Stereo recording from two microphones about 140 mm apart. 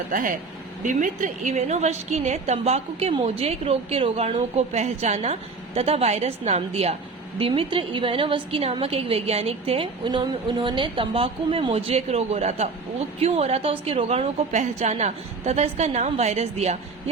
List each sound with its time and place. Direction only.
0.1 s a woman's voice: 70° right (ahead or behind); by 16.7 s 50° right (ahead or behind)